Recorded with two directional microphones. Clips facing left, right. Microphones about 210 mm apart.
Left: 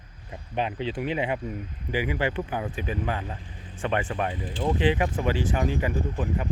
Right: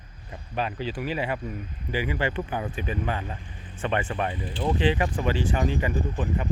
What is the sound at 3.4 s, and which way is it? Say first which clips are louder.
Vehicle: even; 30° left (ahead or behind).